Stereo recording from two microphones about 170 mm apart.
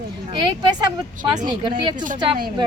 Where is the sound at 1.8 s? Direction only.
25° right (ahead or behind).